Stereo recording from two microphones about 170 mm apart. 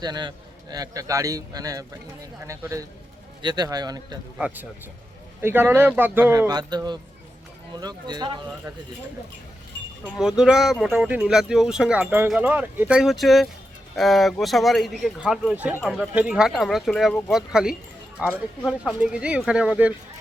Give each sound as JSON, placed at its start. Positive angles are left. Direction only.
{"t": 0.0, "sound": "a man's voice", "side_deg": -25}
{"t": 4.4, "sound": "speech", "side_deg": -5}
{"t": 6.5, "sound": "a man's voice", "side_deg": -25}
{"t": 10.2, "sound": "speech", "side_deg": -5}
{"t": 18.3, "sound": "speech", "side_deg": 5}
{"t": 18.9, "sound": "speech", "side_deg": -5}